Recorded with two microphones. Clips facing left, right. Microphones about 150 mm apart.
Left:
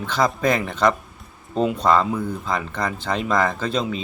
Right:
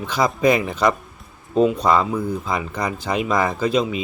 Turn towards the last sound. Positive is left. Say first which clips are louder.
# right 4 dB
turn(degrees=-5)  # may be behind; listen again after turning